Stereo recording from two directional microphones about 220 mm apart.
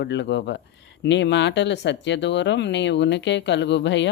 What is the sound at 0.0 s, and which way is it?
Speech, 50° left (ahead or behind).